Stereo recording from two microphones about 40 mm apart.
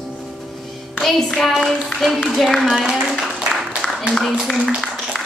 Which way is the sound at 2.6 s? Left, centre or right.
Right.